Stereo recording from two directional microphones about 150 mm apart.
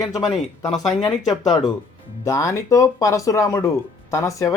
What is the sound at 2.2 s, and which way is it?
Speech, 20° left (ahead or behind).